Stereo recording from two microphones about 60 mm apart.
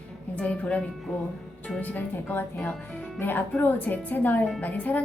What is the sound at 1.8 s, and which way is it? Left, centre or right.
A woman's voice, left.